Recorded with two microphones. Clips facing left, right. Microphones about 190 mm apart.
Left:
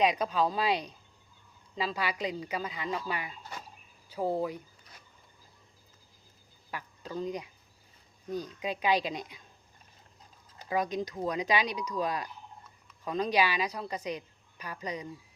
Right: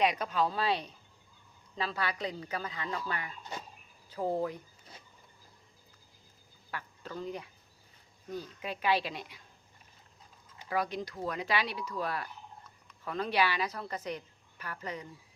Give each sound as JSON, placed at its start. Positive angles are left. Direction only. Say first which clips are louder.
{"t": 0.0, "sound": "a woman's voice", "louder": "left 2 dB", "side_deg": 15}
{"t": 6.7, "sound": "a woman's voice", "louder": "left 2 dB", "side_deg": 15}
{"t": 10.7, "sound": "a woman's voice", "louder": "left 3 dB", "side_deg": 20}